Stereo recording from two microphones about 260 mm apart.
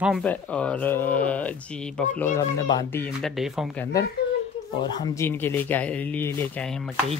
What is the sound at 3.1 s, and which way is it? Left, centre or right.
Speech, centre.